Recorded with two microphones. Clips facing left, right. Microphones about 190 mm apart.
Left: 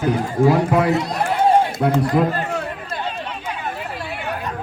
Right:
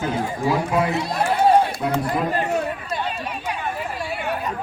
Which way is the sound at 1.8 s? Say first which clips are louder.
Left 4 dB; 55° left (ahead or behind).